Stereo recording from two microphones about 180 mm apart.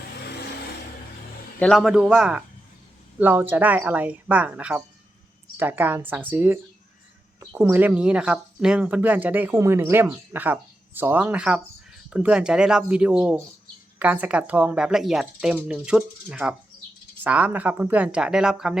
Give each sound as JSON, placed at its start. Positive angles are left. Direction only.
{"t": 0.2, "sound": "vehicle", "side_deg": 65}
{"t": 1.5, "sound": "speech", "side_deg": 5}